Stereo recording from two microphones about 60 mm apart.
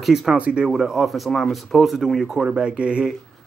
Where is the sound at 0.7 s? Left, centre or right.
Centre.